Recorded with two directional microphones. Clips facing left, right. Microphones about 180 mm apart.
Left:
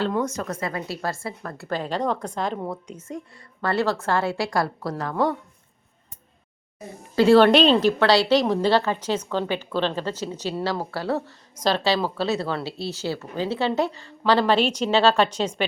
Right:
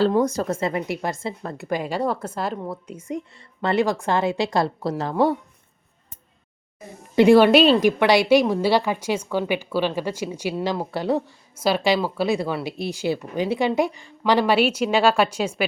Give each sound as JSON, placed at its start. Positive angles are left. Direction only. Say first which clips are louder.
{"t": 0.0, "sound": "a woman's voice", "louder": "right 5 dB", "side_deg": -35}
{"t": 3.1, "sound": "a woman's voice", "louder": "right 6 dB", "side_deg": -20}
{"t": 7.2, "sound": "speech", "louder": "right 2 dB", "side_deg": -15}